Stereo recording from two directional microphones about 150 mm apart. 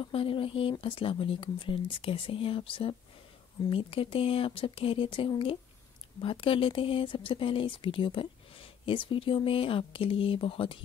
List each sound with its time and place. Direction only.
0.1 s speech: 35° left (ahead or behind)